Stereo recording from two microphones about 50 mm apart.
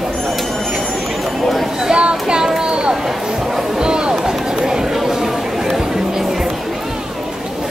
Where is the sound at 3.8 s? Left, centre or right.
Centre.